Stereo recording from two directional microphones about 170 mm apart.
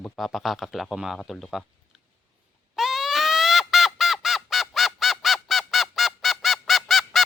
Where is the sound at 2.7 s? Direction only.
Centre (ahead or behind).